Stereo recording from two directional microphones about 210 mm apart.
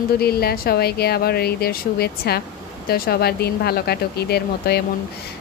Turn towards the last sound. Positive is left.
turn(degrees=50)  # may be behind; listen again after turning